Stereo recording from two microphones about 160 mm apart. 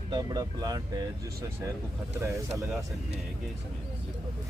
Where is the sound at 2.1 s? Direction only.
15° right (ahead or behind).